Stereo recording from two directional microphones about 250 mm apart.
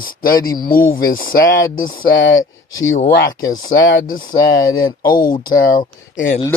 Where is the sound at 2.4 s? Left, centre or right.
Centre.